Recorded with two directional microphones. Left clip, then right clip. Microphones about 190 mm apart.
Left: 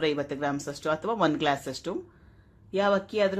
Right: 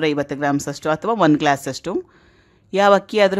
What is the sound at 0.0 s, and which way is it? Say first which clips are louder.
Speech: right 8 dB; 30° right (ahead or behind).